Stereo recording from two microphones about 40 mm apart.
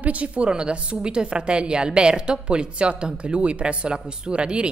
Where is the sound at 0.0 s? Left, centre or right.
Right.